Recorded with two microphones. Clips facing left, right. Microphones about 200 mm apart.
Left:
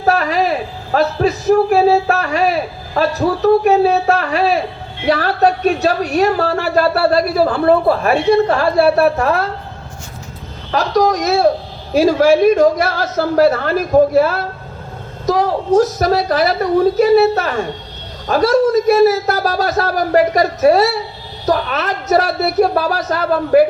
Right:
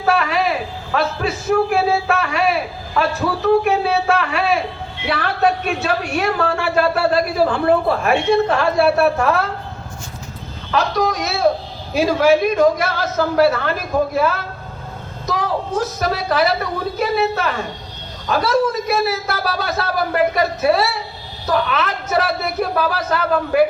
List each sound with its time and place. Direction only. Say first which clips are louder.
0.0 s a man's voice: left 3 dB; 40° left (ahead or behind)
10.7 s a man's voice: left 4 dB; 40° left (ahead or behind)